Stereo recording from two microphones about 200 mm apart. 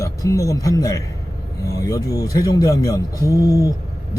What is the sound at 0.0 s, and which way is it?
A man's voice, 15° left (ahead or behind).